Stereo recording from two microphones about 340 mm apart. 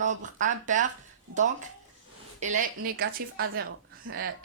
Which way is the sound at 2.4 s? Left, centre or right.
Right.